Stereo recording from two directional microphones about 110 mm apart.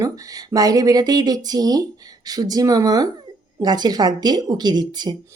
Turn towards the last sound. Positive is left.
turn(degrees=-40)  # may be behind; listen again after turning